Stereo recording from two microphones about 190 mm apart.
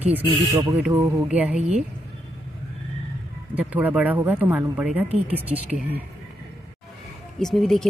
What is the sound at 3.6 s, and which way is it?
Speech, 10° right (ahead or behind).